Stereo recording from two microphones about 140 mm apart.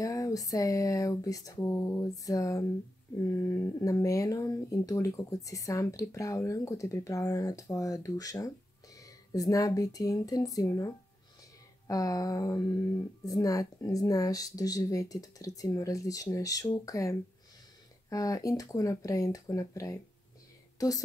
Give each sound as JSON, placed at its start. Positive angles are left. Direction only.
{"t": 0.0, "sound": "speech", "side_deg": 25}